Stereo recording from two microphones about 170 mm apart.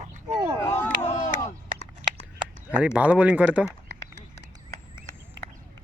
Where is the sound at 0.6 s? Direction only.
15° left (ahead or behind).